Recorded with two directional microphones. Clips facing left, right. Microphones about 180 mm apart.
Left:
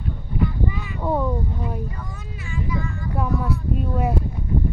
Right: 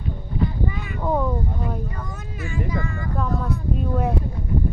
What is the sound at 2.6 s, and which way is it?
Speech, 60° right (ahead or behind).